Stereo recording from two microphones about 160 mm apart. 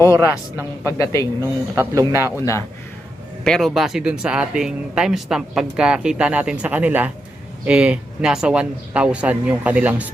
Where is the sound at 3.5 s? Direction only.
Centre (ahead or behind).